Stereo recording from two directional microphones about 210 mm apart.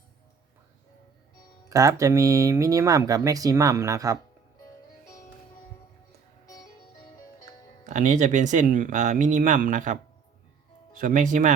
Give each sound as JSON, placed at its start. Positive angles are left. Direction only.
{"t": 1.7, "sound": "speech", "side_deg": -15}
{"t": 6.4, "sound": "music", "side_deg": 15}
{"t": 7.9, "sound": "speech", "side_deg": -35}